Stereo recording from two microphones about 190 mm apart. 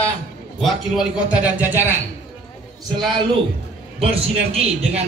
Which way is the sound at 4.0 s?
30° right (ahead or behind).